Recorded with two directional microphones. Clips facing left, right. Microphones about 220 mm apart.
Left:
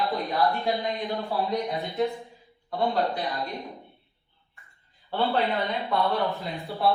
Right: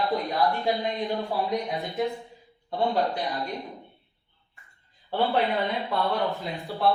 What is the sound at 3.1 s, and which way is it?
Speech, 15° right (ahead or behind).